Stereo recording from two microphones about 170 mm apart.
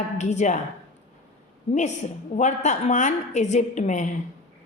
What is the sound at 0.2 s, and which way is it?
Speech, 45° left (ahead or behind).